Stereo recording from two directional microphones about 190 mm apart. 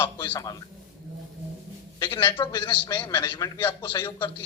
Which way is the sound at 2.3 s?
25° left (ahead or behind).